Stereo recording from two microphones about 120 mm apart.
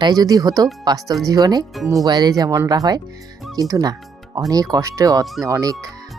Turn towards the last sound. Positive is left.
turn(degrees=-30)  # may be behind; listen again after turning